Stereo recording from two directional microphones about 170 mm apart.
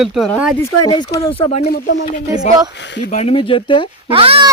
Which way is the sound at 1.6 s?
70° left (ahead or behind).